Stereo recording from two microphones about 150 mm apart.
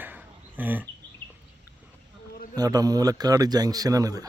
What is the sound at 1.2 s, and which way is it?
Bird, 10° left (ahead or behind).